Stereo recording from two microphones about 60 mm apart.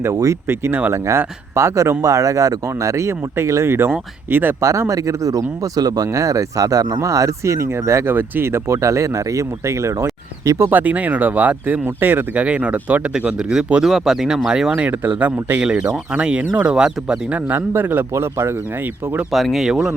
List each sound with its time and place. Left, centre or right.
0.1 s speech: right
0.4 s a man's voice: right
4.6 s speech: right
10.7 s speech: right
13.1 s speech: centre
14.8 s speech: right
16.1 s speech: centre
17.3 s a man's voice: right
18.1 s speech: right
19.3 s speech: centre
19.6 s speech: centre